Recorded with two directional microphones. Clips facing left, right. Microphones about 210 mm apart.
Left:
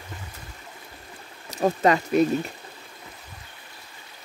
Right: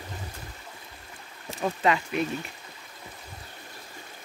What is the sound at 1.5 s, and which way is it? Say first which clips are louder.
Speech: left 5 dB; 40° left (ahead or behind).